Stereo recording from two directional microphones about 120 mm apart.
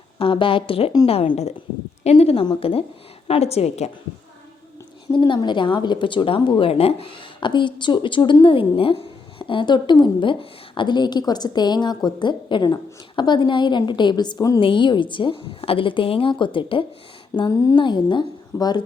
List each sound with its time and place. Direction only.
0.2 s a woman's voice: 45° left (ahead or behind)
5.1 s a woman's voice: 40° left (ahead or behind)
14.6 s speech: 45° left (ahead or behind)
17.3 s a woman's voice: 35° left (ahead or behind)
17.8 s a woman's voice: 40° left (ahead or behind)